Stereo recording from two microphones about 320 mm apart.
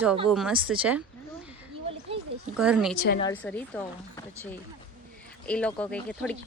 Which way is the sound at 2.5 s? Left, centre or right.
Centre.